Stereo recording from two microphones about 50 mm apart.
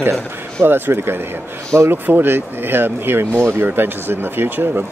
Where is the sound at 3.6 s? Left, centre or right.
Right.